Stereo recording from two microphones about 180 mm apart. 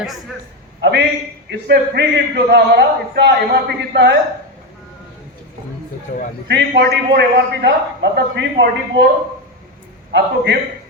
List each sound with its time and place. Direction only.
0.8 s a man's voice: 70° right (ahead or behind)
6.1 s a man's voice: 55° left (ahead or behind)
6.5 s a man's voice: 65° right (ahead or behind)
10.1 s a man's voice: 75° right (ahead or behind)